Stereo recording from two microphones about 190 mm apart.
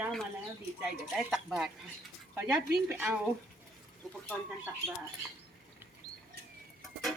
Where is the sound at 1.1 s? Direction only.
Centre (ahead or behind).